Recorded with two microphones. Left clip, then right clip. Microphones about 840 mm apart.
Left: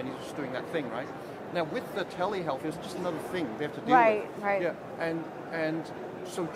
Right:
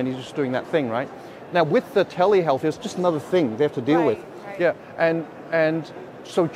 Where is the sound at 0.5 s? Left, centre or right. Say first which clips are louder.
Right 10 dB; right.